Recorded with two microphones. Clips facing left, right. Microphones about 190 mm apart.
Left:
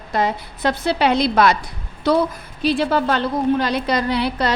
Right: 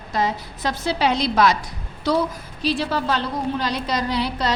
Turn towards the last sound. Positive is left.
turn(degrees=60)  # may be behind; listen again after turning